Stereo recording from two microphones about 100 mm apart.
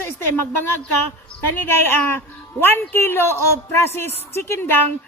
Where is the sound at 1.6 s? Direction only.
20° left (ahead or behind).